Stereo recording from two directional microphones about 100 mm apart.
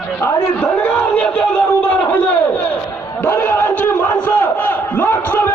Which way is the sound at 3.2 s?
20° left (ahead or behind).